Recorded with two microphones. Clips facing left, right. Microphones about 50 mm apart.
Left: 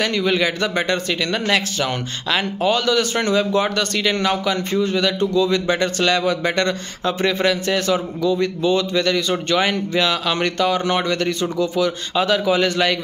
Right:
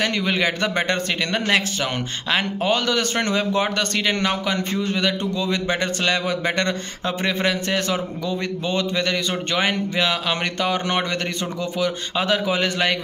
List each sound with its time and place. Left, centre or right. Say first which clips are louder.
0.0 s a man's voice: left 2 dB; right